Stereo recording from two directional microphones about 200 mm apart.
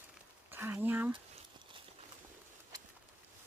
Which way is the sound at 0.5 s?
10° right (ahead or behind).